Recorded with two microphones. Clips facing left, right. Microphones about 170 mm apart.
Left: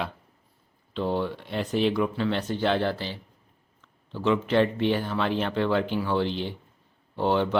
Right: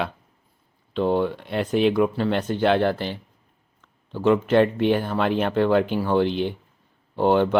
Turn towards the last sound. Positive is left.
turn(degrees=-50)  # may be behind; listen again after turning